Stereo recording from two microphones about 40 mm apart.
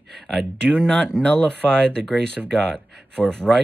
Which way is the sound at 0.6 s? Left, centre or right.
Centre.